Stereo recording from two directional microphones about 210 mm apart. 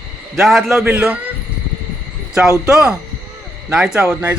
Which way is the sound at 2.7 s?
5° right (ahead or behind).